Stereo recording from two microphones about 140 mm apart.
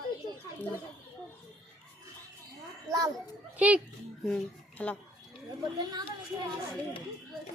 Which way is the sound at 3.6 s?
10° right (ahead or behind).